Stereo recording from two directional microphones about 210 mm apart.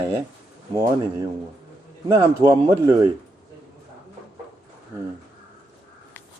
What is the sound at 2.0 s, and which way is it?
Speech, 15° right (ahead or behind).